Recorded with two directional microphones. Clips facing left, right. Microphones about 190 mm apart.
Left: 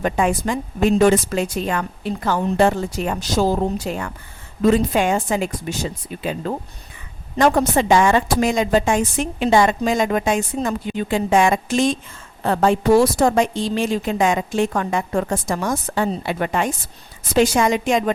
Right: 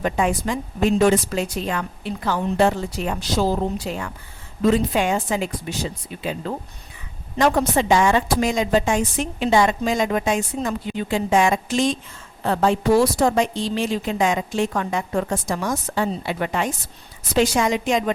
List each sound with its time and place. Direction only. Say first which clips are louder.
0.0 s a woman's voice: left 2 dB; 50° left (ahead or behind)